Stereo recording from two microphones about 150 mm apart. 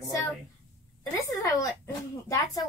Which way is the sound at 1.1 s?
20° left (ahead or behind).